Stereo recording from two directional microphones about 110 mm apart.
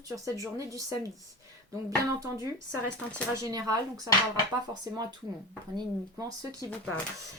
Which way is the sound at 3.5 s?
35° right (ahead or behind).